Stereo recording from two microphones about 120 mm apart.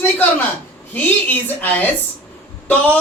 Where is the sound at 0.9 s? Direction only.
15° left (ahead or behind).